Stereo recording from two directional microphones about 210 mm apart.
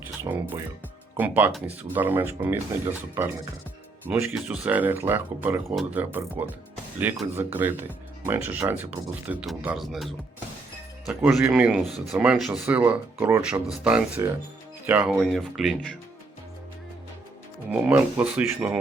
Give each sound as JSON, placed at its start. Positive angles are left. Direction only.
{"t": 0.3, "sound": "speech", "side_deg": -15}
{"t": 17.7, "sound": "speech", "side_deg": -5}